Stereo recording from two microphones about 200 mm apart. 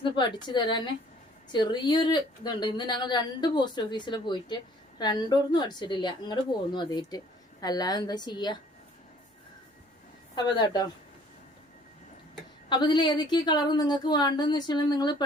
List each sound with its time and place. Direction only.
0.0 s a woman's voice: 20° left (ahead or behind)
10.3 s a woman's voice: 20° left (ahead or behind)
12.6 s a woman's voice: 25° left (ahead or behind)